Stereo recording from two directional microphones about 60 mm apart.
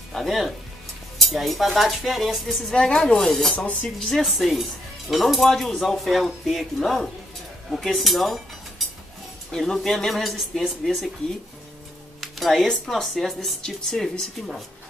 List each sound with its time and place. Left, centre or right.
0.1 s speech: centre
2.7 s a woman's voice: centre
12.2 s a woman's voice: centre